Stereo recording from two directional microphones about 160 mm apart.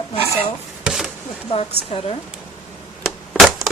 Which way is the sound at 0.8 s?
Centre (ahead or behind).